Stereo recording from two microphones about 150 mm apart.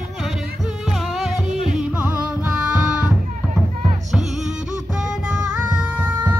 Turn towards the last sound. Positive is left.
turn(degrees=-10)  # may be behind; listen again after turning